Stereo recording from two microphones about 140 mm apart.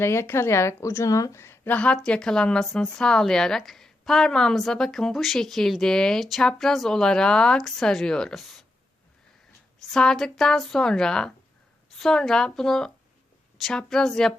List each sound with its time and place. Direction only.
0.0 s a woman's voice: 20° left (ahead or behind); by 8.6 s centre (ahead or behind)
9.9 s a woman's voice: 5° left (ahead or behind)